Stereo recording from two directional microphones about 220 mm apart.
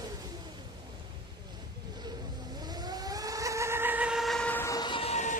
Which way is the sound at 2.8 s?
15° right (ahead or behind).